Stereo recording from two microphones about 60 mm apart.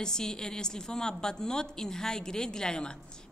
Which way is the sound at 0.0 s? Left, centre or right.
Centre.